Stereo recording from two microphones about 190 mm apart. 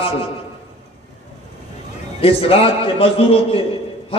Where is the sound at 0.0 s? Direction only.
30° left (ahead or behind).